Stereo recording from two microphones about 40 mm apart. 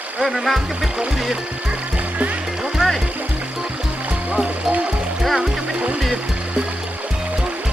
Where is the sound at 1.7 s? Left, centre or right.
Right.